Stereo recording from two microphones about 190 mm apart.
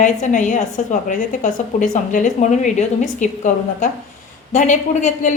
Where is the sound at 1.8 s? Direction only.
40° left (ahead or behind).